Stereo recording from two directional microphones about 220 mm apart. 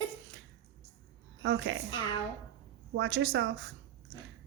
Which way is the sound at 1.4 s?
65° right (ahead or behind).